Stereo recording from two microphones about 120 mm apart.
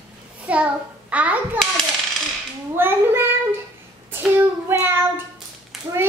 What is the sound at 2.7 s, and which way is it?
Speech, 20° right (ahead or behind).